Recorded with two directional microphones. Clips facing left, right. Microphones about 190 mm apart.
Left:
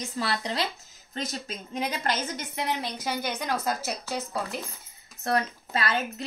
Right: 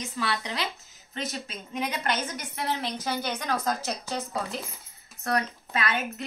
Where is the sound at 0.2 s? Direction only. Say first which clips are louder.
Left 2 dB; 35° left (ahead or behind).